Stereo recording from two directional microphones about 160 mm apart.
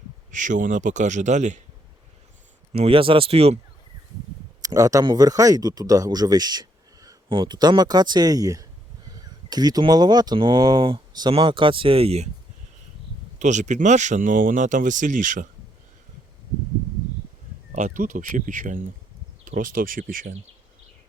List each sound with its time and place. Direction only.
0.3 s speech: 50° right (ahead or behind)
2.7 s speech: 35° right (ahead or behind)
4.6 s speech: 20° right (ahead or behind); by 12.3 s 40° right (ahead or behind)
13.4 s speech: 50° right (ahead or behind)
17.7 s speech: 50° right (ahead or behind)